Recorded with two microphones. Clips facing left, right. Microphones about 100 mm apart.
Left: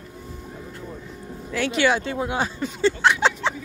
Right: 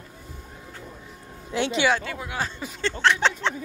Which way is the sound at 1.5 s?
25° right (ahead or behind).